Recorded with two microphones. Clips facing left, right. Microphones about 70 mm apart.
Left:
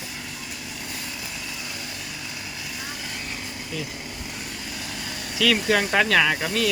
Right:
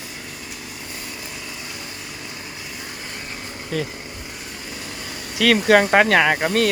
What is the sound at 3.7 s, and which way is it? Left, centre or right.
Speech, right.